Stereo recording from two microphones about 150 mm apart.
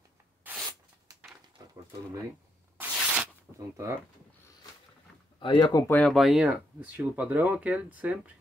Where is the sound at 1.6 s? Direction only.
25° right (ahead or behind).